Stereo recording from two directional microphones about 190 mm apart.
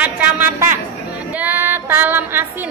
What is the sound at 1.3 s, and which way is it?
Female singing, 10° right (ahead or behind).